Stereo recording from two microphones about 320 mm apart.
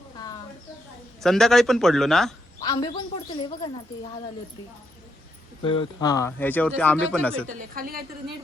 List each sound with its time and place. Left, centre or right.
1.2 s speech: centre
2.6 s a woman's voice: centre
5.6 s speech: centre
7.4 s a woman's voice: right